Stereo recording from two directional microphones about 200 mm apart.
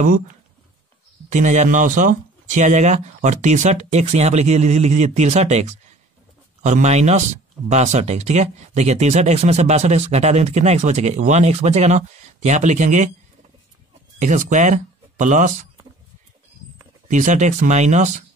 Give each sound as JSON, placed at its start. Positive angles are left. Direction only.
{"t": 1.3, "sound": "speech", "side_deg": -35}
{"t": 14.2, "sound": "speech", "side_deg": -40}
{"t": 17.1, "sound": "speech", "side_deg": -40}